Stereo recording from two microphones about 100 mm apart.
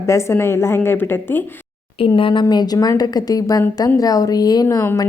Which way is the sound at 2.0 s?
60° left (ahead or behind).